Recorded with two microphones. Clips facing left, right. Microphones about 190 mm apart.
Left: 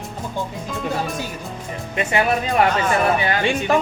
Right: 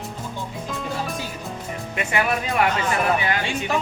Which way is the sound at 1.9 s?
25° left (ahead or behind).